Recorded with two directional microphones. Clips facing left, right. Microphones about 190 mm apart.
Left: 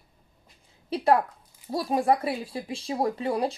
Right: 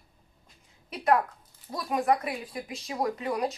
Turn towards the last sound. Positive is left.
turn(degrees=30)  # may be behind; listen again after turning